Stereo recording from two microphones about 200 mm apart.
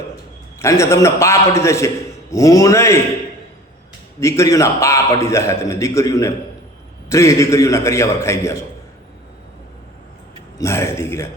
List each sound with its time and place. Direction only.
0.6 s a man's voice: 15° left (ahead or behind)
4.2 s a man's voice: 15° left (ahead or behind)
10.6 s a man's voice: 15° left (ahead or behind)